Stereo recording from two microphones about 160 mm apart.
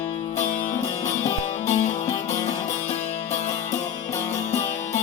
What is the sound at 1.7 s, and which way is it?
Music, 45° left (ahead or behind).